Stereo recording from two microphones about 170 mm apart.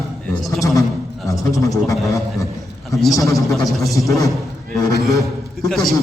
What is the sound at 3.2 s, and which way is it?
Speech, 20° left (ahead or behind).